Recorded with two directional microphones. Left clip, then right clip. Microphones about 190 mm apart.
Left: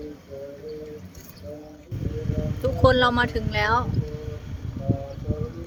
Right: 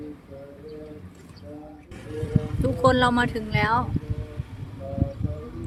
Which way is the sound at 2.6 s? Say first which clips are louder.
Left 1 dB; 10° right (ahead or behind).